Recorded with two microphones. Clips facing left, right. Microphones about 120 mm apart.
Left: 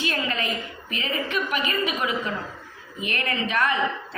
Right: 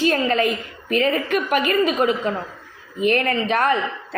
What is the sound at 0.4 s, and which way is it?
A woman's voice, 50° right (ahead or behind).